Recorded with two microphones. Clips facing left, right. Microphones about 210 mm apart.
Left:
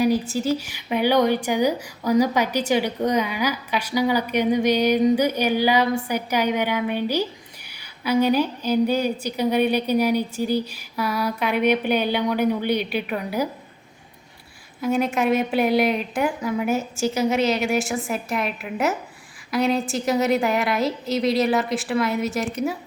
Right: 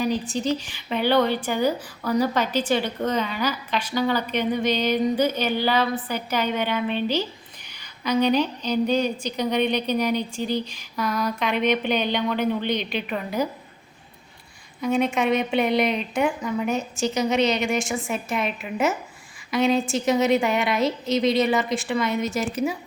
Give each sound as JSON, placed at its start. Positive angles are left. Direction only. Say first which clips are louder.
{"t": 0.0, "sound": "a woman's voice", "louder": "left 4 dB", "side_deg": 10}
{"t": 14.8, "sound": "a woman's voice", "louder": "left 1 dB", "side_deg": 0}